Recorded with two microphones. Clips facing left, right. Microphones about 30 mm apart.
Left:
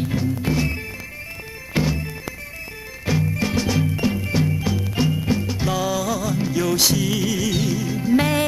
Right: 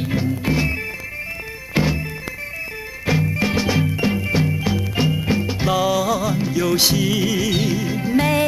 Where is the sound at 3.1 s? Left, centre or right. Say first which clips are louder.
Right 2 dB; right.